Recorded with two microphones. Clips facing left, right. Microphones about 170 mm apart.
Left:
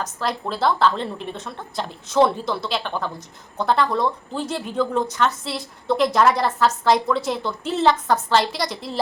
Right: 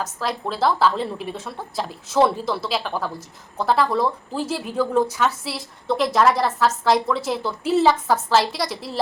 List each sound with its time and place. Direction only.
0.0 s speech: centre (ahead or behind)